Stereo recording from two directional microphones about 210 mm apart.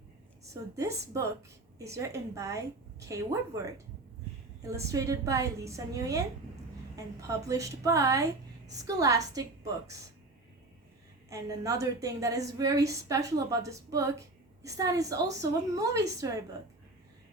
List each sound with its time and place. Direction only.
0.5 s a woman's voice: 15° right (ahead or behind)
4.6 s a woman's voice: 15° right (ahead or behind)
11.3 s a woman's voice: 15° right (ahead or behind)